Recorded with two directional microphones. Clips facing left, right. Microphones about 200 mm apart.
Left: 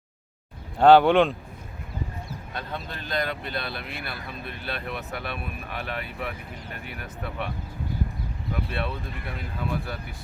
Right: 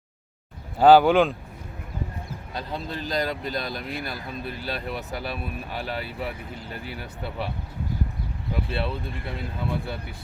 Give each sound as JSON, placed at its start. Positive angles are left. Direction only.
{"t": 0.8, "sound": "speech", "side_deg": -5}
{"t": 2.5, "sound": "speech", "side_deg": -35}
{"t": 8.7, "sound": "speech", "side_deg": -30}